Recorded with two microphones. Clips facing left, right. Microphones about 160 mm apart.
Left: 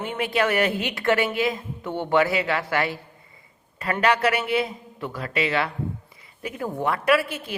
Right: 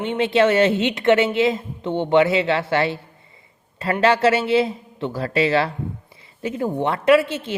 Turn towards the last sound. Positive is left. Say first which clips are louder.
# right 6 dB
turn(degrees=-25)  # may be behind; listen again after turning